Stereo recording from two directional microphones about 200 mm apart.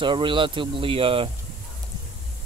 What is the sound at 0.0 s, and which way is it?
Speech, 25° right (ahead or behind).